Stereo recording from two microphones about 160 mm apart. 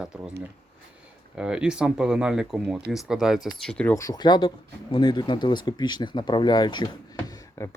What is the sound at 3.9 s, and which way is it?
Speech, 25° left (ahead or behind).